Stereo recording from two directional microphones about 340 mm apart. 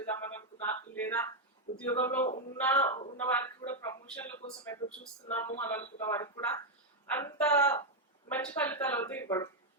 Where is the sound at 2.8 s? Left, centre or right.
Centre.